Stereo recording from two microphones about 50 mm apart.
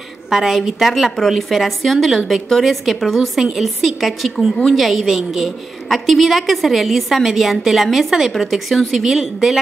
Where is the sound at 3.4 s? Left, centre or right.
Centre.